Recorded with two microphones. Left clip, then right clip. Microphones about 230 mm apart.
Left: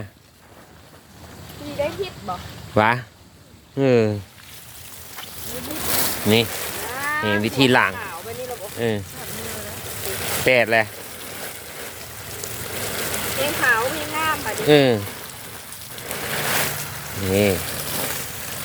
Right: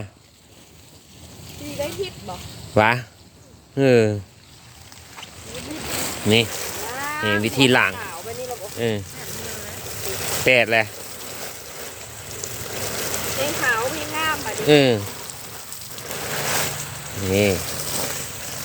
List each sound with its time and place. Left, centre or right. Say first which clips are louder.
2.7 s speech: right 1 dB; centre
5.5 s vehicle: left 3 dB; left
6.2 s speech: right 1 dB; centre
6.9 s a sound: left 3 dB; centre
7.3 s speech: right 2 dB; centre
8.2 s a sound: even; centre
8.5 s boat: left 1 dB; centre
14.3 s speech: even; centre
16.0 s a sound: left 1 dB; centre
18.1 s vehicle: left 1 dB; centre